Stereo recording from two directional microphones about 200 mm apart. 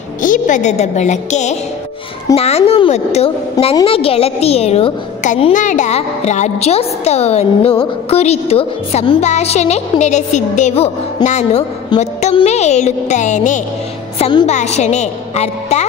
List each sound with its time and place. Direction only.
0.2 s a woman's voice: 40° left (ahead or behind)